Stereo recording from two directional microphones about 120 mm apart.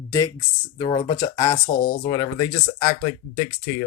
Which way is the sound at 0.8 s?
40° left (ahead or behind).